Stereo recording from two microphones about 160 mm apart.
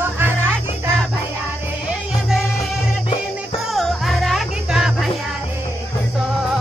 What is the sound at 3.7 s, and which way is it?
Music, centre (ahead or behind).